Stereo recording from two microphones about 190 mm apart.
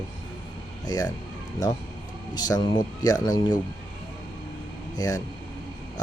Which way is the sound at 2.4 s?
20° left (ahead or behind).